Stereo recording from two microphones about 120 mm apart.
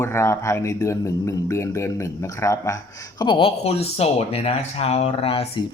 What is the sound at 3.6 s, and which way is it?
Speech, 60° left (ahead or behind).